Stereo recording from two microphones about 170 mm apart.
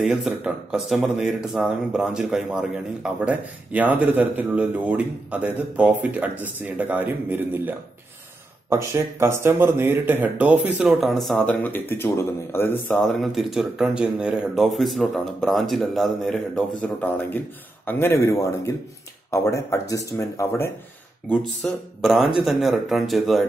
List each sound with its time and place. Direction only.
0.0 s speech: 5° right (ahead or behind)